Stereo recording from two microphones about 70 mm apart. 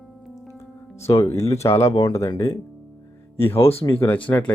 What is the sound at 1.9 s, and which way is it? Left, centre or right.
Speech, left.